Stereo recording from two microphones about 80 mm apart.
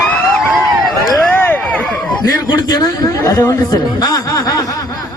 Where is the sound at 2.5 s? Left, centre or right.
Left.